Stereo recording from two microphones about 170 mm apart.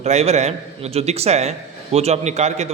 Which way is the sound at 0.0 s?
40° right (ahead or behind).